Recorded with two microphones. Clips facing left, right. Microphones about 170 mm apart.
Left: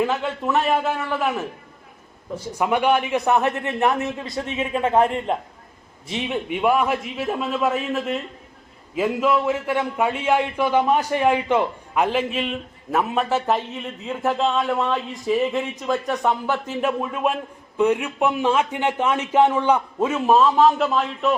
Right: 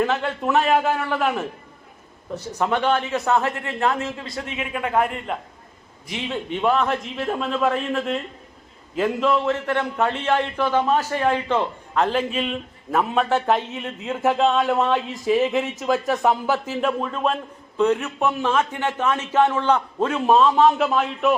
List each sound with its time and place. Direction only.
0.0 s a man's voice: 5° left (ahead or behind); by 5.4 s 30° left (ahead or behind)
6.1 s a man's voice: 20° left (ahead or behind); by 16.9 s 5° right (ahead or behind)
17.0 s a man's voice: 10° left (ahead or behind)